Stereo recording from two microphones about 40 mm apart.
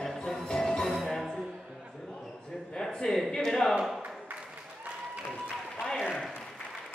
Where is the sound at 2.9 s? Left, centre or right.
Centre.